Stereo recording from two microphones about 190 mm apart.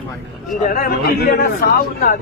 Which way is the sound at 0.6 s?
50° left (ahead or behind).